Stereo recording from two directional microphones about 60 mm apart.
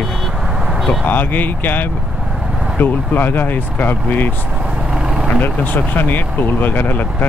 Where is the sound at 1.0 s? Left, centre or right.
Left.